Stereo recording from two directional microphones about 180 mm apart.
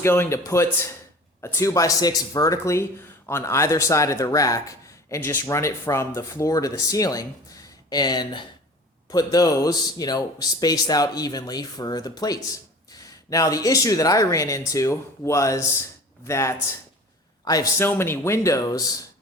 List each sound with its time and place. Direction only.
0.0 s speech: 15° left (ahead or behind)